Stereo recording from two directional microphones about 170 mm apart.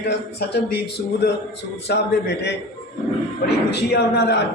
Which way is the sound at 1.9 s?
80° left.